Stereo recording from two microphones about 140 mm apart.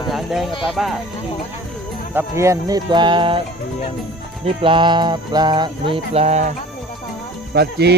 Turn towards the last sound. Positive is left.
turn(degrees=-90)